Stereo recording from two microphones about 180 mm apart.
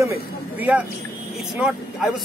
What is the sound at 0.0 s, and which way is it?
Speech, 15° right (ahead or behind).